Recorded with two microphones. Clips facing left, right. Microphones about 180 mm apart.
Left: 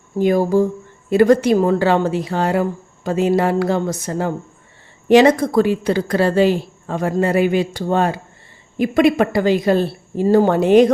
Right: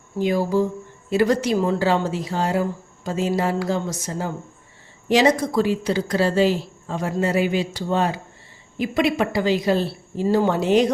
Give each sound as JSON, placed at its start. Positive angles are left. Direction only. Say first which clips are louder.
{"t": 0.2, "sound": "a woman's voice", "louder": "left 5 dB", "side_deg": 50}